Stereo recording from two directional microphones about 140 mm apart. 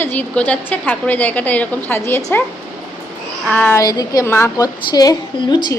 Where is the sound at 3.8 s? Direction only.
25° left (ahead or behind).